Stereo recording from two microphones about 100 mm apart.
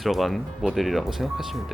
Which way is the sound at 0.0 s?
Centre (ahead or behind).